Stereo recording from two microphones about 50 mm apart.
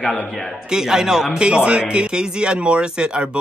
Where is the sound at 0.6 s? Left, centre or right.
Centre.